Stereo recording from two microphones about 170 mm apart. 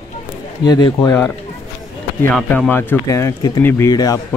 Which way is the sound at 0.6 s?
25° left (ahead or behind).